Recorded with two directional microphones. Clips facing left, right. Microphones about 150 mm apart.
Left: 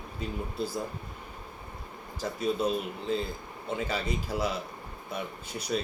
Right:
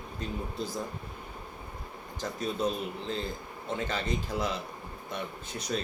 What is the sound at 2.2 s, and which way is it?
Speech, 10° left (ahead or behind).